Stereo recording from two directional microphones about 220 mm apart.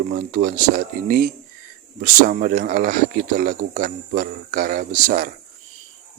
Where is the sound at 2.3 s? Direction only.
40° right (ahead or behind).